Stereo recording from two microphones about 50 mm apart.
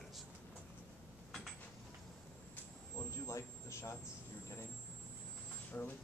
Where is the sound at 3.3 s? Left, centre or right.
Left.